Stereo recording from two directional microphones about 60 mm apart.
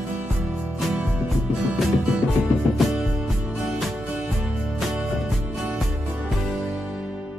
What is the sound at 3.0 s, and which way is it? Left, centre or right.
Music, centre.